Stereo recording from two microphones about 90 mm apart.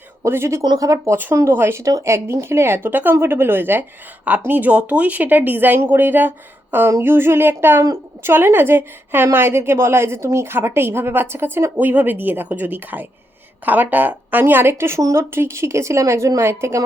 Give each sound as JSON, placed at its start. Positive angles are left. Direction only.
{"t": 0.2, "sound": "a woman's voice", "side_deg": -30}
{"t": 0.6, "sound": "a woman's voice", "side_deg": -45}
{"t": 1.1, "sound": "a woman's voice", "side_deg": -25}